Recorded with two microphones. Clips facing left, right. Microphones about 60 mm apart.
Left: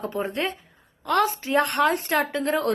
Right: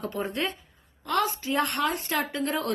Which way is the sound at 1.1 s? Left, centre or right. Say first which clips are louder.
Left 5 dB; left.